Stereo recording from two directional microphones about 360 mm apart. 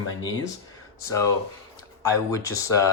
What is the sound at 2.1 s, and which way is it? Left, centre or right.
Speech, centre.